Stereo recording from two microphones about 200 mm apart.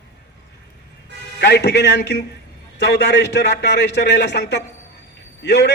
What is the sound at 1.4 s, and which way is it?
A man's voice, 60° left (ahead or behind).